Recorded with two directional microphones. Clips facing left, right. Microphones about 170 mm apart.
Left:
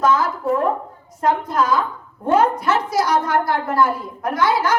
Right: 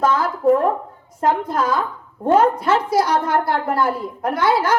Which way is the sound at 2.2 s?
30° right (ahead or behind).